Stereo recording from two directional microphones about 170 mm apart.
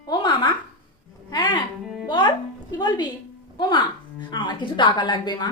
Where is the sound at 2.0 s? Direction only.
25° left (ahead or behind).